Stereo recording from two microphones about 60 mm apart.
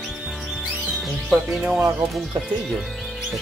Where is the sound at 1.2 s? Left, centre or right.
Centre.